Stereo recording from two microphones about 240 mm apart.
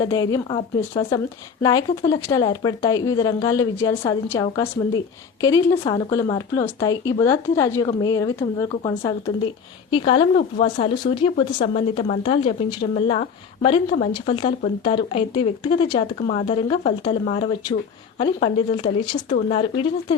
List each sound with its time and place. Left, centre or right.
0.0 s a woman's voice: centre